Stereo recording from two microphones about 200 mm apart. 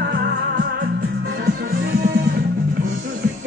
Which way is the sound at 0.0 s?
55° right (ahead or behind).